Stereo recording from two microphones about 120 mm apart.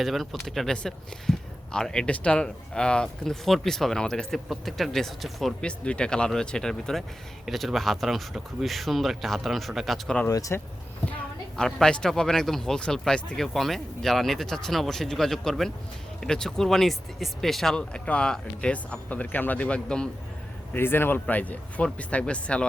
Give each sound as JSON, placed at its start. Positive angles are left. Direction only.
{"t": 0.0, "sound": "speech", "side_deg": 0}
{"t": 10.2, "sound": "speech", "side_deg": 30}
{"t": 11.5, "sound": "speech", "side_deg": 5}
{"t": 20.7, "sound": "speech", "side_deg": 20}